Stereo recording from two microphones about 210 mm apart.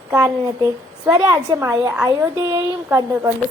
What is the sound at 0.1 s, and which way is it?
A woman's voice, 15° right (ahead or behind).